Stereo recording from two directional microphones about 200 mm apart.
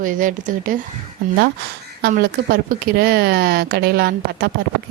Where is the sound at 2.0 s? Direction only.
50° right (ahead or behind).